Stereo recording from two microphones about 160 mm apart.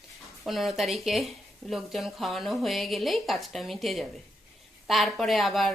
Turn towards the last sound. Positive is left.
turn(degrees=0)  # may be behind; listen again after turning